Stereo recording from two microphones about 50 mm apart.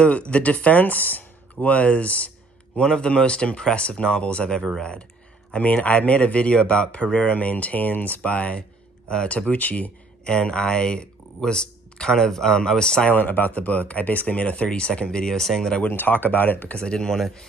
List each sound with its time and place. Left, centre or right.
0.0 s speech: left
2.8 s speech: centre
5.8 s speech: left
10.2 s speech: centre
13.1 s speech: left; by 15.7 s centre
15.9 s speech: left
16.8 s speech: centre